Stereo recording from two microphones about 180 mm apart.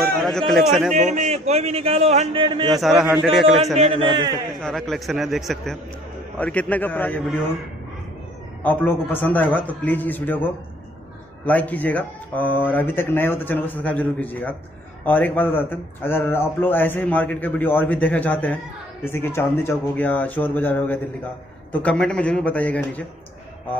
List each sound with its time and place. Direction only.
0.0 s speech: centre (ahead or behind)
0.9 s a man's voice: 40° right (ahead or behind)
2.7 s a man's voice: centre (ahead or behind)
3.7 s a man's voice: 30° right (ahead or behind)
4.6 s a man's voice: 5° left (ahead or behind)
8.6 s a man's voice: 10° left (ahead or behind)